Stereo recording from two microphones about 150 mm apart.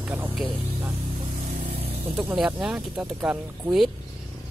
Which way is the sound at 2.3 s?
10° right (ahead or behind).